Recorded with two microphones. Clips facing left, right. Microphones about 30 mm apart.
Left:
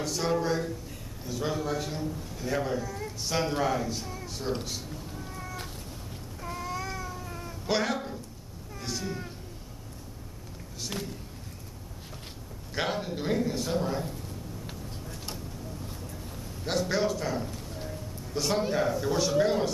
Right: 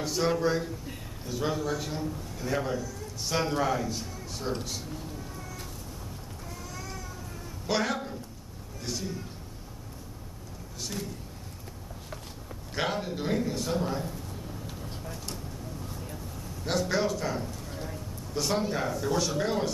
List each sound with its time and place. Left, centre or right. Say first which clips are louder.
0.0 s a man's voice: right 2 dB; centre
2.8 s a woman's voice: left 3 dB; left
3.3 s a man's voice: even; centre
6.4 s a sound: left 9 dB; left
6.9 s cat: left 4 dB; left
7.6 s a man's voice: even; centre
8.8 s cat: even; centre
12.7 s a man's voice: even; centre
16.6 s a man's voice: even; centre